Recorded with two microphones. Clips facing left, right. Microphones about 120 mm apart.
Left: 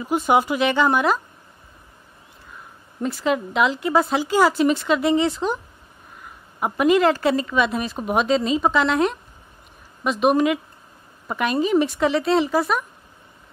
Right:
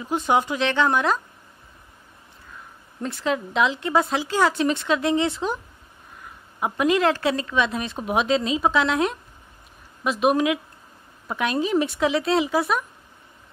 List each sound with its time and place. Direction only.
0.0 s a woman's voice: 5° left (ahead or behind)
3.0 s a woman's voice: 5° left (ahead or behind)
6.6 s a woman's voice: centre (ahead or behind)